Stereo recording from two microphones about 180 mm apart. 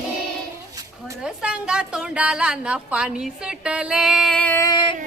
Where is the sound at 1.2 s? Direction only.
5° right (ahead or behind).